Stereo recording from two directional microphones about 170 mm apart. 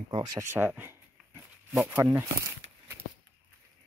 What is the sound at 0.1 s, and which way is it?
Speech, 20° right (ahead or behind).